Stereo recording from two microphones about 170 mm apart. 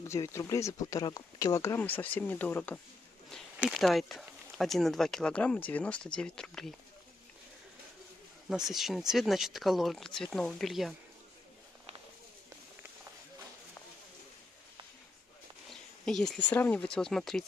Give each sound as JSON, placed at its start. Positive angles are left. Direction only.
{"t": 0.1, "sound": "speech", "side_deg": 15}
{"t": 3.3, "sound": "a sound", "side_deg": 5}
{"t": 3.6, "sound": "speech", "side_deg": 0}
{"t": 8.5, "sound": "speech", "side_deg": 0}
{"t": 15.7, "sound": "speech", "side_deg": 5}